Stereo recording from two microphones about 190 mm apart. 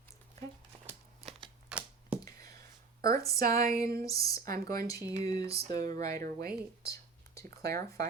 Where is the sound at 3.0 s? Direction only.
15° left (ahead or behind).